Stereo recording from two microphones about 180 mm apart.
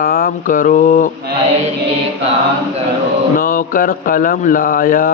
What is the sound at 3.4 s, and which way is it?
Speech, 50° left (ahead or behind).